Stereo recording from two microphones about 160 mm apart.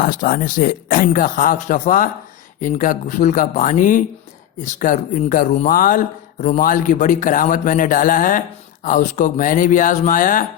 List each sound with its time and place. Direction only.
0.0 s a man's voice: 60° left (ahead or behind)